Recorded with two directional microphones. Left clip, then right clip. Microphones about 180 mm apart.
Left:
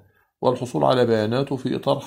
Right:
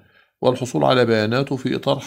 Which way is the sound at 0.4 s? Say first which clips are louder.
Right 2 dB; 20° right (ahead or behind).